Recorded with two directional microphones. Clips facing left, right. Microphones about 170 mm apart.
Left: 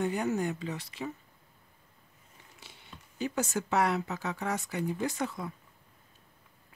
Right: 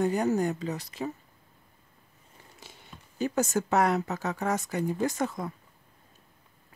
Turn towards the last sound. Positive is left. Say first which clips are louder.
# right 4 dB
turn(degrees=-45)  # may be behind; listen again after turning